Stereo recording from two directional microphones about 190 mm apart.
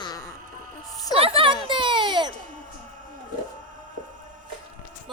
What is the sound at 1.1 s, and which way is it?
Speech, 30° right (ahead or behind).